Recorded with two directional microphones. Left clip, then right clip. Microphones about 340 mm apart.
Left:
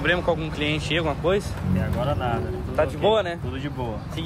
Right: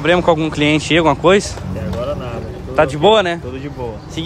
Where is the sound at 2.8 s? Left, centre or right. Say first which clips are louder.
Right 9 dB; right.